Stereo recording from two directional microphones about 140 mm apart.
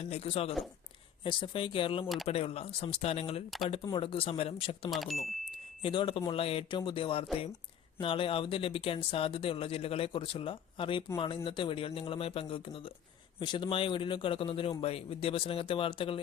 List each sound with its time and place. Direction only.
0.0 s speech: 45° left (ahead or behind)
4.9 s speech: centre (ahead or behind)
5.8 s speech: 40° left (ahead or behind)